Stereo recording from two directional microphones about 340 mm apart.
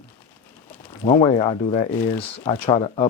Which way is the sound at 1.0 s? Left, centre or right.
Centre.